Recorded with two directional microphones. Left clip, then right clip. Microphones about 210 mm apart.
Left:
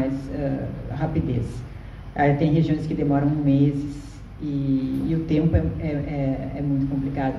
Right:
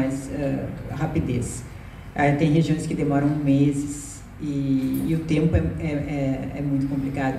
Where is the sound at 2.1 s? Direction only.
50° right (ahead or behind).